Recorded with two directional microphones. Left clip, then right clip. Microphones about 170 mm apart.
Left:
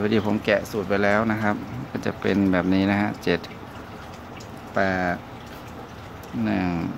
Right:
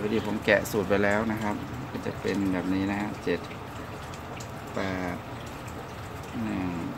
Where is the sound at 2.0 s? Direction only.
50° left (ahead or behind).